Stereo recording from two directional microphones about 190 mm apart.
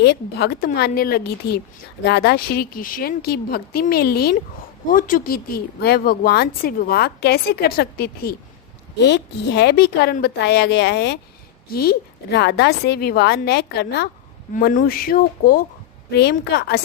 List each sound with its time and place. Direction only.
0.0 s a woman's voice: 60° left (ahead or behind)
9.0 s a woman's voice: 65° left (ahead or behind)
14.5 s speech: 45° left (ahead or behind)
16.4 s a woman's voice: 60° left (ahead or behind)